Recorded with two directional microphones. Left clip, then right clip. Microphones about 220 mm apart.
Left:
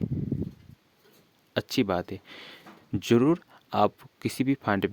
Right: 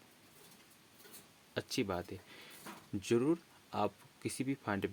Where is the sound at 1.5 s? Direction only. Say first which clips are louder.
Left 11 dB; 45° left (ahead or behind).